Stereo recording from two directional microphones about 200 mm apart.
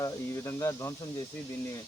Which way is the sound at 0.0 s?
15° left (ahead or behind).